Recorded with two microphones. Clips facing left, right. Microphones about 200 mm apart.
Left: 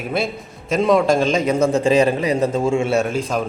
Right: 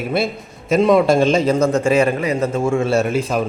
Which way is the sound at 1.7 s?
10° left (ahead or behind).